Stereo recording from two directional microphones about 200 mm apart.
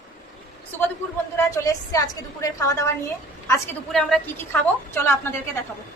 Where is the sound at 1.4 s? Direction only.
15° left (ahead or behind).